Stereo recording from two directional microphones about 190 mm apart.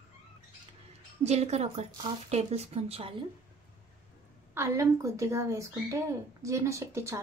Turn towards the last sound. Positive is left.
turn(degrees=-15)  # may be behind; listen again after turning